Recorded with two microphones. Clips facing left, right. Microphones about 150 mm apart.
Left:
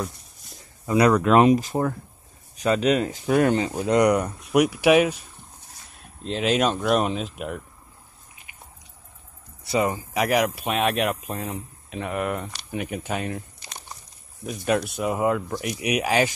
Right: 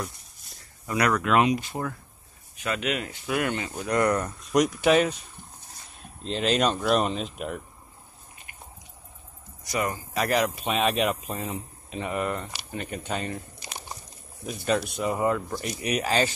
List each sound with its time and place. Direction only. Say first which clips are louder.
0.8 s speech: left 6 dB; 30° left (ahead or behind)
3.7 s speech: left 5 dB; 20° left (ahead or behind)
6.2 s speech: left 2 dB; 5° left (ahead or behind)
9.7 s speech: left 5 dB; 25° left (ahead or behind); by 13.4 s 5° left (ahead or behind)
13.6 s a sound: right 3 dB; 5° right (ahead or behind)
14.4 s speech: left 2 dB; 5° left (ahead or behind)